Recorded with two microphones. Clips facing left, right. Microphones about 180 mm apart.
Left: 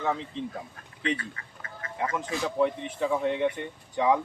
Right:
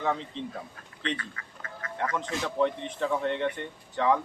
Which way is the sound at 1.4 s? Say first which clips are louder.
Right 1 dB; 30° left (ahead or behind).